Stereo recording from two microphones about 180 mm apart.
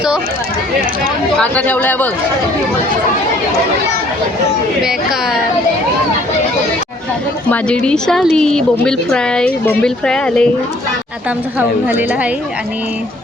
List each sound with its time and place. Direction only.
1.4 s a man's voice: 10° left (ahead or behind)
4.8 s a woman's voice: 5° right (ahead or behind)
7.5 s a woman's voice: 5° left (ahead or behind)
11.9 s a woman's voice: 10° right (ahead or behind)